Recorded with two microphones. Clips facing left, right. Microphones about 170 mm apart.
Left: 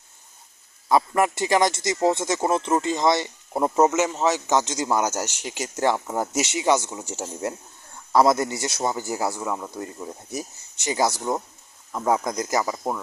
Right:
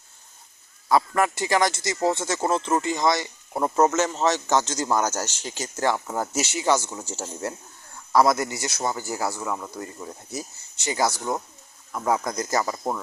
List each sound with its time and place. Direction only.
0.9 s a man's voice: 20° left (ahead or behind)
3.6 s a man's voice: 15° left (ahead or behind)